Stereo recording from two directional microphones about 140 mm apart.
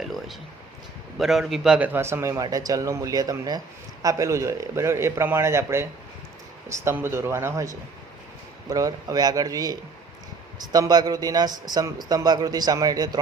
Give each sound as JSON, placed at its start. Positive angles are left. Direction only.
{"t": 0.0, "sound": "a sound", "side_deg": 0}
{"t": 1.2, "sound": "a man's voice", "side_deg": 0}
{"t": 8.7, "sound": "a man's voice", "side_deg": -25}